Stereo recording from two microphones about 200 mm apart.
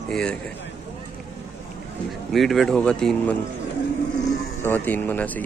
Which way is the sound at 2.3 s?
Centre (ahead or behind).